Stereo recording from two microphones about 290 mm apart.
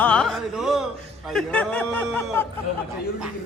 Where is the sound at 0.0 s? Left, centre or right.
Centre.